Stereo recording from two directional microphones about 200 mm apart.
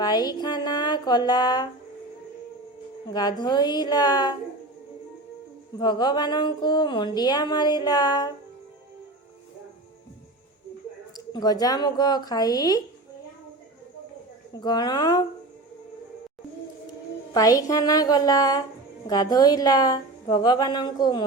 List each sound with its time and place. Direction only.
0.0 s speech: 20° left (ahead or behind)
3.1 s speech: 20° left (ahead or behind)
5.8 s speech: 20° left (ahead or behind)
11.3 s speech: 20° left (ahead or behind)
14.5 s speech: 20° left (ahead or behind)
17.3 s a woman's voice: 15° left (ahead or behind)